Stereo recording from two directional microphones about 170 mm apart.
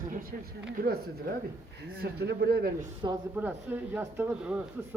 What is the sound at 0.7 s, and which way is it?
Speech, 65° right (ahead or behind).